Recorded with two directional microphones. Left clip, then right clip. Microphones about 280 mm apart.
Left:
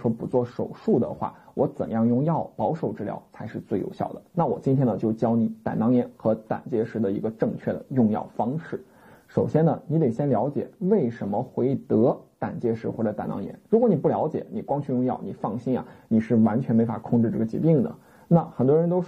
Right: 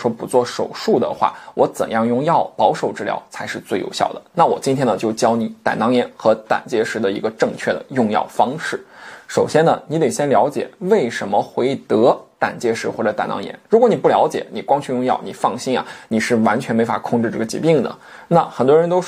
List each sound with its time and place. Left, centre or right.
0.0 s speech: right
2.3 s speech: right
2.8 s speech: centre
4.1 s speech: right
4.6 s speech: centre
15.1 s speech: right
16.2 s speech: centre